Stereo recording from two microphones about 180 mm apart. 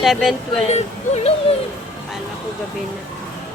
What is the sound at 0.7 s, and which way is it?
Speech, 35° left (ahead or behind).